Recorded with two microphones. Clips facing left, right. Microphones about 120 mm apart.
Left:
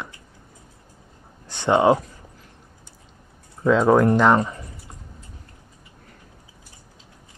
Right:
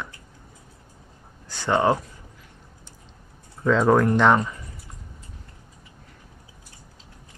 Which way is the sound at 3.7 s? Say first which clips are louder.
Left 2 dB; 10° left (ahead or behind).